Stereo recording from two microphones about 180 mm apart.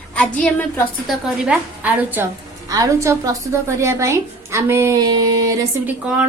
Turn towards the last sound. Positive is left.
turn(degrees=-5)  # may be behind; listen again after turning